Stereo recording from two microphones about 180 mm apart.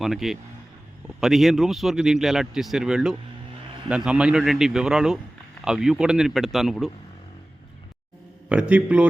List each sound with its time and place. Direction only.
0.0 s speech: centre (ahead or behind)
8.4 s a man's voice: 5° right (ahead or behind)